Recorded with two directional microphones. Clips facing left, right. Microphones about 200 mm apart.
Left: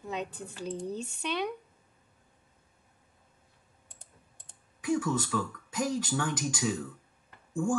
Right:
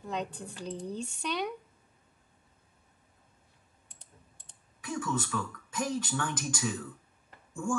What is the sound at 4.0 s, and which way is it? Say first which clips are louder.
Computer keyboard: even; 50° left (ahead or behind).